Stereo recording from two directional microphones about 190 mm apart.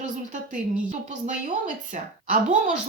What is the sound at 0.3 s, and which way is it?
A woman's voice, 40° right (ahead or behind).